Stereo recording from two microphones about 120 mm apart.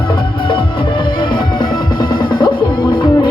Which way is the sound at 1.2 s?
40° left (ahead or behind).